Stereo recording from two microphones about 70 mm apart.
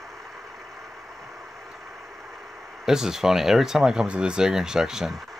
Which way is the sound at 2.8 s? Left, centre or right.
Centre.